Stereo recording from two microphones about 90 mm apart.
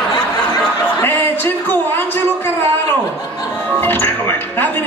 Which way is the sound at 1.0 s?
25° left (ahead or behind).